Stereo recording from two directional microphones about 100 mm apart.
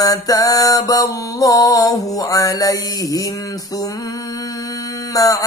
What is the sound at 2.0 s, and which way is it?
Mantra, 35° left (ahead or behind).